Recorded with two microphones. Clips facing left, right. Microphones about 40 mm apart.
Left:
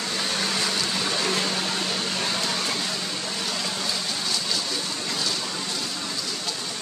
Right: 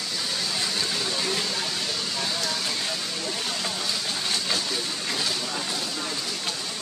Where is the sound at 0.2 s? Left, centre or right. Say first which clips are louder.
Left 3 dB; left.